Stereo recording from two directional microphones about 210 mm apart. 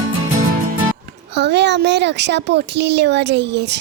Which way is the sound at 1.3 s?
55° right (ahead or behind).